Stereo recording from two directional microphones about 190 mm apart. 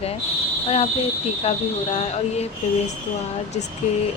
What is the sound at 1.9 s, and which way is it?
Speech, 35° left (ahead or behind).